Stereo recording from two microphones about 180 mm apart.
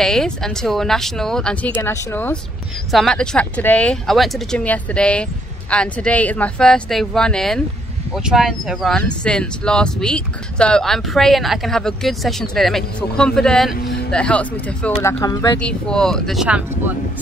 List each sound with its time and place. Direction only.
0.0 s speech: centre (ahead or behind)
2.9 s speech: centre (ahead or behind)
13.7 s a sound: 60° left (ahead or behind)
14.1 s speech: 5° left (ahead or behind)
15.6 s speech: 5° left (ahead or behind)